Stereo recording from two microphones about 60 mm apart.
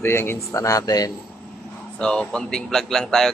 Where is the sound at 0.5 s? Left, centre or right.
Left.